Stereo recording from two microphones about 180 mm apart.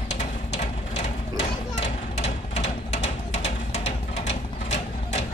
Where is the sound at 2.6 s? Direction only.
40° left (ahead or behind).